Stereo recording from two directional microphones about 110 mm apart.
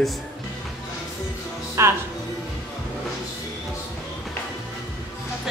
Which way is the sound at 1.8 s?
25° right (ahead or behind).